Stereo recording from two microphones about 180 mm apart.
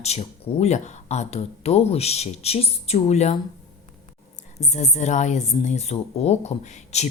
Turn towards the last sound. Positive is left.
turn(degrees=35)  # may be behind; listen again after turning